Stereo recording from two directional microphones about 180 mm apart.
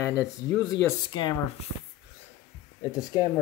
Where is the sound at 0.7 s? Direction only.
25° left (ahead or behind).